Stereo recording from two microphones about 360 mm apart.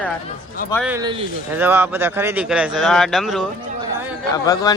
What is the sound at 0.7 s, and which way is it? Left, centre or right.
Speech, centre.